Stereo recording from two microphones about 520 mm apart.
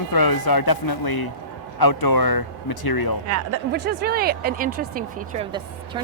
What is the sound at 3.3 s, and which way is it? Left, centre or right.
Speech, right.